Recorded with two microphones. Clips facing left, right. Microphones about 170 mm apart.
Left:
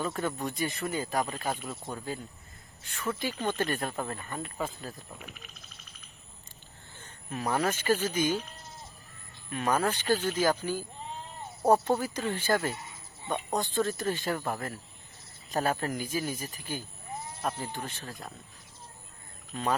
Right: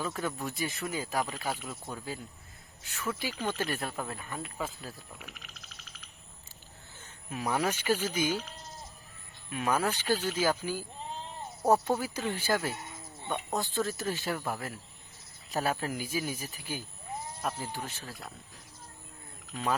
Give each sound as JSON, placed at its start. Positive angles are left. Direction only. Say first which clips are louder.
{"t": 0.0, "sound": "speech", "louder": "left 2 dB", "side_deg": 0}
{"t": 5.3, "sound": "a sound", "louder": "left 1 dB", "side_deg": -80}
{"t": 7.3, "sound": "speech", "louder": "left 1 dB", "side_deg": -10}
{"t": 9.5, "sound": "speech", "louder": "left 2 dB", "side_deg": -10}
{"t": 11.9, "sound": "speech", "louder": "left 2 dB", "side_deg": -5}